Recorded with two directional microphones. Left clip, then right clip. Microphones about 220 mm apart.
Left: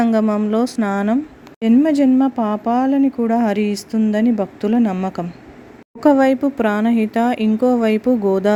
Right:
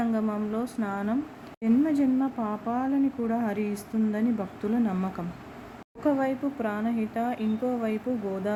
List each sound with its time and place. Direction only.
0.0 s speech: 40° left (ahead or behind)